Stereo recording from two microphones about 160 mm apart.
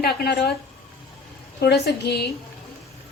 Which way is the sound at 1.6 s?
90° left.